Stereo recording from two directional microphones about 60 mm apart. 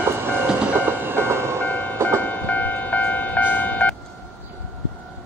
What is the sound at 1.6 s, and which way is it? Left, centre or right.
Train, left.